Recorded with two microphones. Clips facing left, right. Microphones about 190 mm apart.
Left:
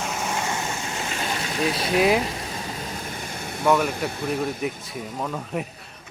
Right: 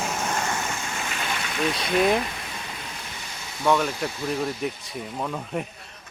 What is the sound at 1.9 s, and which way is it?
Speech, 5° left (ahead or behind).